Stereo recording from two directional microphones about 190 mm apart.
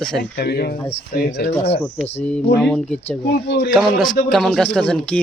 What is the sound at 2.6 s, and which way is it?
Speech, 5° left (ahead or behind).